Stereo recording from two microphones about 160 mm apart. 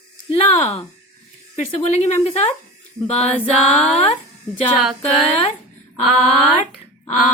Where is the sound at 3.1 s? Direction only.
40° left (ahead or behind).